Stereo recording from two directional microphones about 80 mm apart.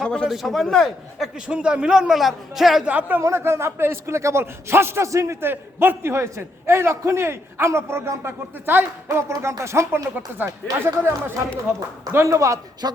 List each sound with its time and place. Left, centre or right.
0.0 s a man's voice: centre
1.5 s a man's voice: centre
2.8 s speech: centre
3.2 s a man's voice: right
12.8 s a sound: right